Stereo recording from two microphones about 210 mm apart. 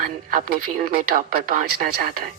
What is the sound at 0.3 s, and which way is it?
Speech, 40° right (ahead or behind).